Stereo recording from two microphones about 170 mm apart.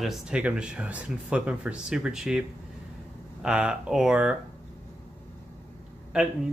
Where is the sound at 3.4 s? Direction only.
5° right (ahead or behind).